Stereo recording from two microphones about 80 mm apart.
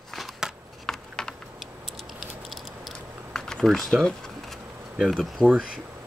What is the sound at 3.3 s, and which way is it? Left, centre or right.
Speech, centre.